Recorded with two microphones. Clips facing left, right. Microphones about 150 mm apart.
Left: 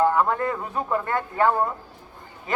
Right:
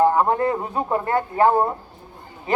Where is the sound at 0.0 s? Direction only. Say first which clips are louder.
Right 3 dB; 30° right (ahead or behind).